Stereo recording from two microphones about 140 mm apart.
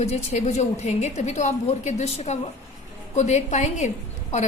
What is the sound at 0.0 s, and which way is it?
A woman's voice, 50° left (ahead or behind).